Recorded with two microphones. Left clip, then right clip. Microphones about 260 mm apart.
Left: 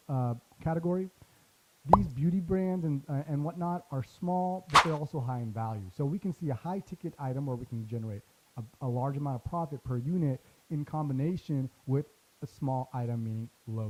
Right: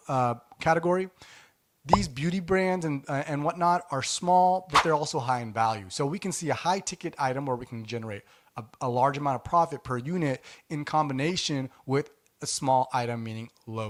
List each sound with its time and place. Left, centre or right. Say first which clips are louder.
0.1 s speech: right 11 dB; centre
4.3 s a sound: right 11 dB; right
4.7 s speech: right 1 dB; centre
5.2 s speech: right 12 dB; centre